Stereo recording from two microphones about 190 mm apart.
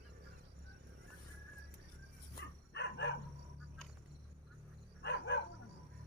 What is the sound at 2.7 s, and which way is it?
Dog, 65° left (ahead or behind).